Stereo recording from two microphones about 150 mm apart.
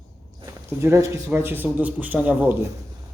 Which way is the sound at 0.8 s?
20° right (ahead or behind).